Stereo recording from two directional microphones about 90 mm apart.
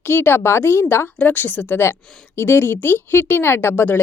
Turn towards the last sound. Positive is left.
turn(degrees=25)  # may be behind; listen again after turning